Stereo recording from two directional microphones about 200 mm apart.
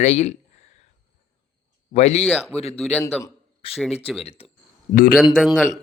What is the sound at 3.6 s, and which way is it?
Speech, 25° left (ahead or behind).